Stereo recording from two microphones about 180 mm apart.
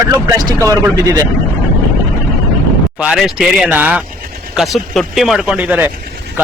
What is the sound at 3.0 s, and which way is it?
Speech, 5° right (ahead or behind).